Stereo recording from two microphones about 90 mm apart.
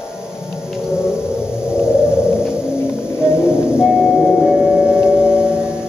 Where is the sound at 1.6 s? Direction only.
10° right (ahead or behind).